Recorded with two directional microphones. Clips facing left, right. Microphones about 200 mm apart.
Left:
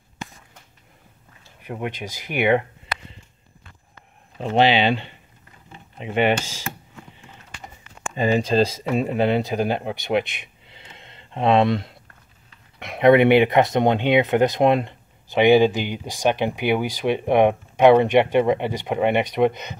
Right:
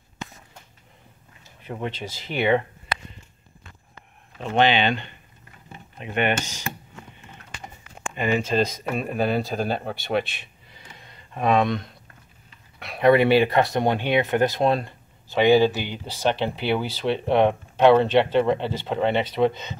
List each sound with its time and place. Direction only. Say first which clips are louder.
1.6 s speech: left 1 dB; 10° left (ahead or behind)
4.4 s speech: left 2 dB; 30° left (ahead or behind)
6.0 s speech: left 4 dB; 90° left
8.2 s speech: left 3 dB; 35° left (ahead or behind); by 19.8 s 15° left (ahead or behind)